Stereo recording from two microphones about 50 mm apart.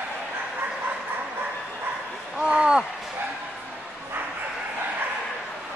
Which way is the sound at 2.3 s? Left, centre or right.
Centre.